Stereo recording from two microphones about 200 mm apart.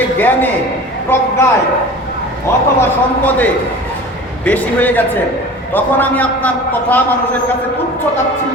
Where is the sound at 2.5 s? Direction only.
15° left (ahead or behind).